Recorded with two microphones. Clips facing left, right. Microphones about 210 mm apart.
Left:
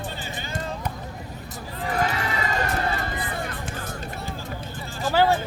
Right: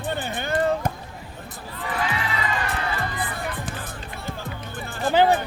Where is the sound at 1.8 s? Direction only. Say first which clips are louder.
Left 2 dB; 40° left (ahead or behind).